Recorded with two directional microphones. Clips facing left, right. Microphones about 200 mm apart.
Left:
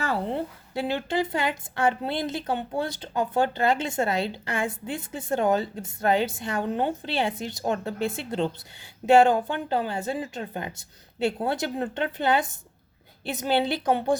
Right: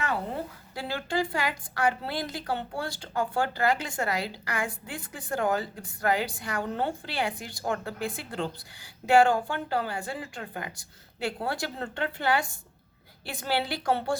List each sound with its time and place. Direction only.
0.0 s a woman's voice: 25° left (ahead or behind)